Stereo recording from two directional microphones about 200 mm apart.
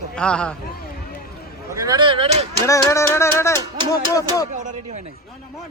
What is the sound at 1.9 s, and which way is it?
Speech, 25° right (ahead or behind).